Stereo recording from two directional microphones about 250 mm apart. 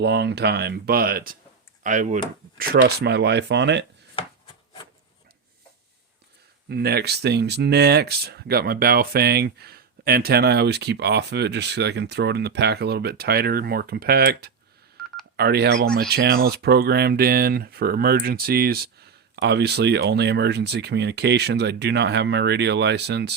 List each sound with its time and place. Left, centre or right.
0.0 s speech: right
2.6 s speech: right
6.7 s speech: right
15.0 s telephone dialing: centre
15.4 s speech: right